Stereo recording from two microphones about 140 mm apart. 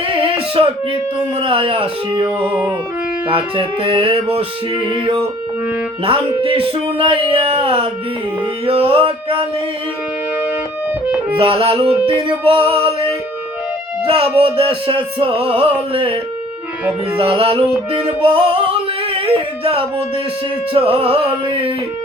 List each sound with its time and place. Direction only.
0.0 s music: 40° right (ahead or behind)
1.4 s speech: 40° right (ahead or behind)
3.2 s speech: 40° right (ahead or behind)
11.3 s speech: 40° right (ahead or behind)
14.3 s speech: 40° right (ahead or behind)
17.2 s music: 40° right (ahead or behind)
20.7 s speech: 40° right (ahead or behind)